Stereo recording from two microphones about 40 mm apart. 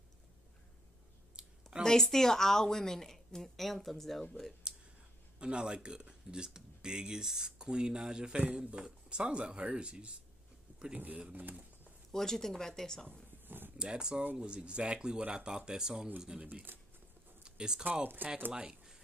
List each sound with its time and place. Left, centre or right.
1.4 s a sound: right
1.8 s a woman's voice: centre
5.4 s speech: right
10.7 s a sound: right
11.3 s speech: right
12.1 s a woman's voice: centre
13.7 s speech: right
16.4 s speech: right
17.5 s speech: centre
18.0 s speech: right
18.5 s speech: centre